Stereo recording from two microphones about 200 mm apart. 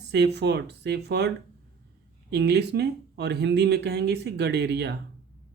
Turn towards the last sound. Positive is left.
turn(degrees=-55)  # may be behind; listen again after turning